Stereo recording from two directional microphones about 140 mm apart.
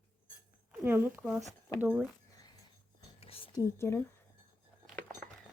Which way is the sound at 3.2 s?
45° left (ahead or behind).